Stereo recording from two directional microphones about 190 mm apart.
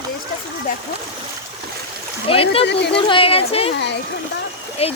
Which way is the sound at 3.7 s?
65° left (ahead or behind).